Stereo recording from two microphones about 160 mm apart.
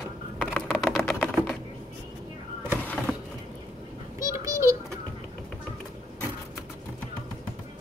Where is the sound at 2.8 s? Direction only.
5° left (ahead or behind).